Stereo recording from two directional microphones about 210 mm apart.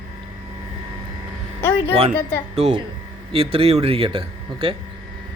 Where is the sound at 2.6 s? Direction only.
30° right (ahead or behind).